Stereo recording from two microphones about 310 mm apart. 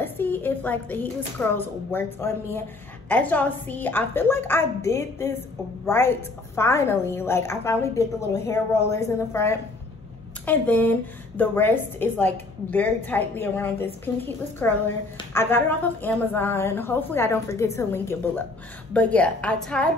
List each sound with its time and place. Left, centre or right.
0.0 s a woman's voice: centre